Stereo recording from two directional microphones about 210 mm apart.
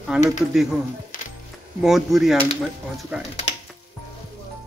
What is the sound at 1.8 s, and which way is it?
Speech, centre (ahead or behind).